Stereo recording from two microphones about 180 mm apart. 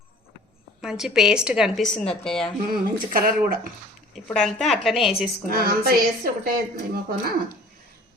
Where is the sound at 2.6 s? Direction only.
55° right (ahead or behind).